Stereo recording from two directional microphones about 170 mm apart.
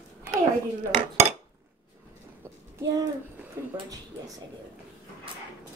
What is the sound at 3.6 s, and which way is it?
Speech, 15° right (ahead or behind).